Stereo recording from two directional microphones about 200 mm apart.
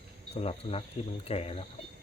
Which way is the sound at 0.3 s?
30° left (ahead or behind).